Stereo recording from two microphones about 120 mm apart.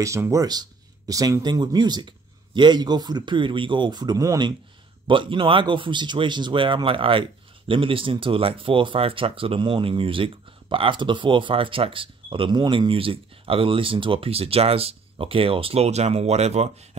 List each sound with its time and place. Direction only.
0.0 s speech: 25° right (ahead or behind)
5.0 s speech: 45° right (ahead or behind); by 16.7 s 65° right (ahead or behind)